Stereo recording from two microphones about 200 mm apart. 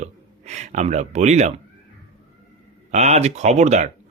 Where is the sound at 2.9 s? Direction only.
35° right (ahead or behind).